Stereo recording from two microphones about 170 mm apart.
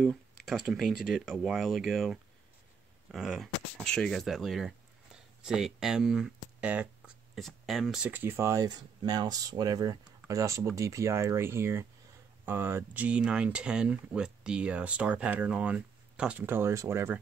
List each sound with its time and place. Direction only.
0.0 s speech: centre (ahead or behind); by 17.2 s 15° right (ahead or behind)